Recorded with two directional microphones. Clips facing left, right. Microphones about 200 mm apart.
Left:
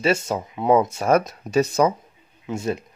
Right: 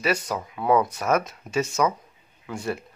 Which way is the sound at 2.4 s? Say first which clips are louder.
Left 4 dB; 20° left (ahead or behind).